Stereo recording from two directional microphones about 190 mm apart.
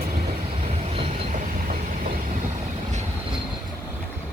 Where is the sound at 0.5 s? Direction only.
35° right (ahead or behind).